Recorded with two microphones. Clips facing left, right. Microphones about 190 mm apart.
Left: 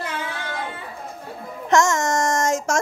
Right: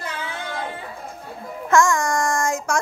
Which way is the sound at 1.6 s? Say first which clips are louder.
Even; 20° left (ahead or behind).